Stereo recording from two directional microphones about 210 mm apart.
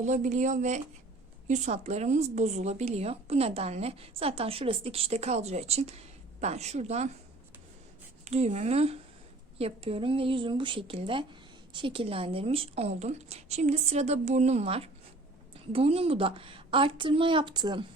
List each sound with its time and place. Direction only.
0.0 s speech: 35° right (ahead or behind)
8.2 s a woman's voice: 30° right (ahead or behind)